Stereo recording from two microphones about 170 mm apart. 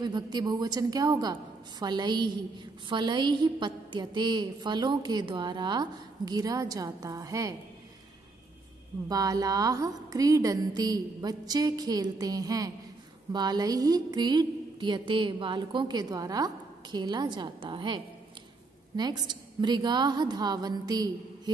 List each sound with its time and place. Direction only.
0.0 s a woman's voice: 25° right (ahead or behind)
9.1 s a woman's voice: 20° right (ahead or behind)
19.2 s a woman's voice: 25° right (ahead or behind)